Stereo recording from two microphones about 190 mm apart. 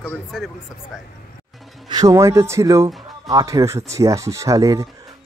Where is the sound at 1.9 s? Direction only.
20° right (ahead or behind).